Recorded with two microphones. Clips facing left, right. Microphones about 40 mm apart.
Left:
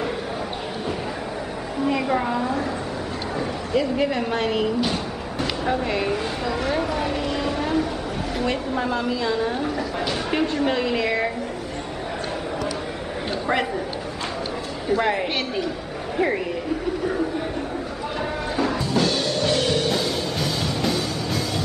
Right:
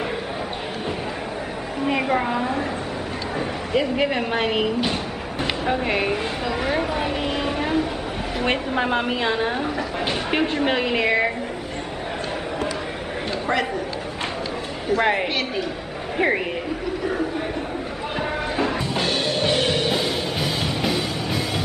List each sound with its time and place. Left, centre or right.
1.9 s a woman's voice: right
3.3 s a sound: right
8.5 s a woman's voice: right
10.0 s speech: right
15.0 s a woman's voice: right
18.6 s music: right